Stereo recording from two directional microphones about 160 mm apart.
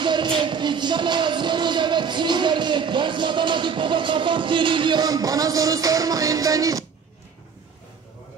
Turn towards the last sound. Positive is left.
turn(degrees=-20)  # may be behind; listen again after turning